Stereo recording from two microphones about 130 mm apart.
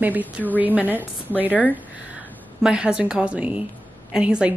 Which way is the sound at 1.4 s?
15° right (ahead or behind).